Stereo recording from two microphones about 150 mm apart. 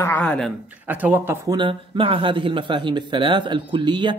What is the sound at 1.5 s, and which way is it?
Speech, 35° right (ahead or behind).